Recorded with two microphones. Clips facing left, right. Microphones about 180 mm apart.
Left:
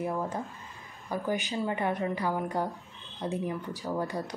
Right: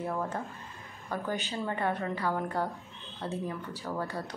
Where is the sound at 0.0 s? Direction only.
15° left (ahead or behind).